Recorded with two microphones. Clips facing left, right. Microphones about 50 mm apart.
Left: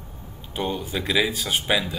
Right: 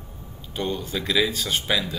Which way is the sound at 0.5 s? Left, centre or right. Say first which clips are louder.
Left 1 dB; centre.